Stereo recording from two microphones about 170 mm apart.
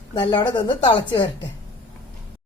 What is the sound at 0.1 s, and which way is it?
A woman's voice, 25° left (ahead or behind).